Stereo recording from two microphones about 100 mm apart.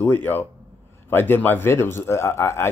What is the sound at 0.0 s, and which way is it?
Speech, 20° left (ahead or behind).